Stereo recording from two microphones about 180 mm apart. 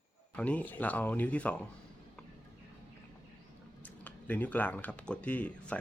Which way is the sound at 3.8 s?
10° left (ahead or behind).